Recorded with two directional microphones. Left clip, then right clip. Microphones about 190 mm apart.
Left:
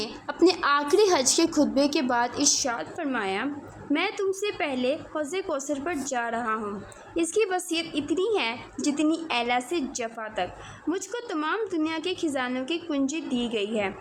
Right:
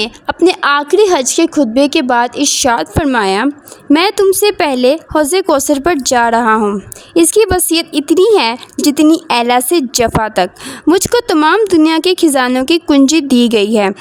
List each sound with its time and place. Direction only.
0.3 s a woman's voice: 45° right (ahead or behind); by 13.9 s 70° right (ahead or behind)